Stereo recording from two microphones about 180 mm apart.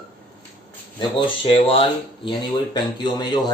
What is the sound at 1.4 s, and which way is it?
Speech, 30° left (ahead or behind).